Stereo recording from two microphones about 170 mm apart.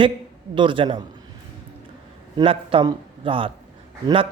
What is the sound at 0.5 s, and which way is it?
Speech, 30° right (ahead or behind).